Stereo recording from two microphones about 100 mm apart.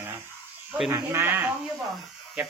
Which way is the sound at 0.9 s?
25° right (ahead or behind).